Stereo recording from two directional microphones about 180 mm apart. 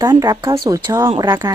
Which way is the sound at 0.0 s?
20° right (ahead or behind).